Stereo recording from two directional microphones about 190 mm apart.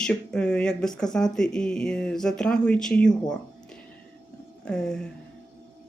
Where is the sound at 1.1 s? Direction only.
5° left (ahead or behind).